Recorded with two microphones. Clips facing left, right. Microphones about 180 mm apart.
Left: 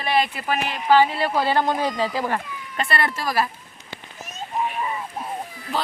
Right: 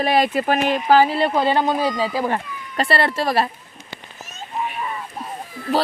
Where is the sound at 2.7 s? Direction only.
35° right (ahead or behind).